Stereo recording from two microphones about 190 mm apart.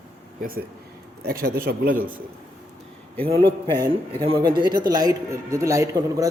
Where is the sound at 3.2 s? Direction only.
30° right (ahead or behind).